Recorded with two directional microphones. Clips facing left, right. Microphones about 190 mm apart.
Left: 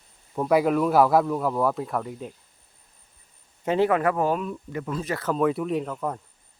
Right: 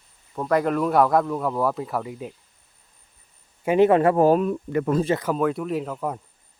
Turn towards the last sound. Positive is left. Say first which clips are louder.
# right 1 dB
turn(degrees=-5)  # may be behind; listen again after turning